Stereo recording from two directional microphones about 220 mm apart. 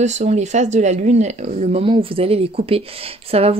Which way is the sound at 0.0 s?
30° right (ahead or behind).